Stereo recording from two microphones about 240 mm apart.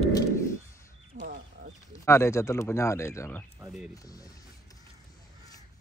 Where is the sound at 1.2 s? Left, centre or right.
Right.